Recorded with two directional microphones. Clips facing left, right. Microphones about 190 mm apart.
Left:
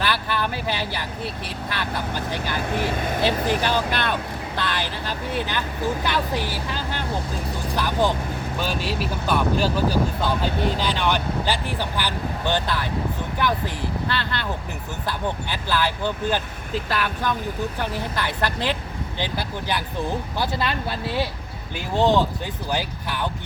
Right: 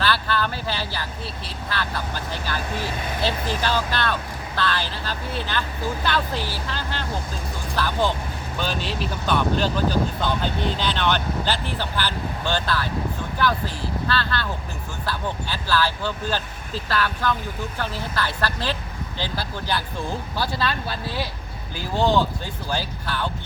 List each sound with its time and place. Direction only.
0.0 s speech: 15° left (ahead or behind)
2.6 s speech: 55° left (ahead or behind)
3.2 s speech: 15° left (ahead or behind)